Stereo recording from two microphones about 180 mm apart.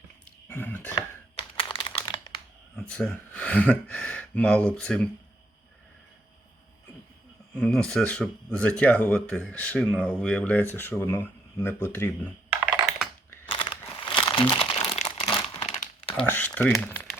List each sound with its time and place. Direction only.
0.4 s speech: 10° left (ahead or behind)
1.4 s typing: 30° left (ahead or behind)
2.7 s speech: 5° left (ahead or behind)
7.5 s speech: 5° left (ahead or behind)
13.5 s crumpling: 30° left (ahead or behind)
16.1 s speech: 10° left (ahead or behind)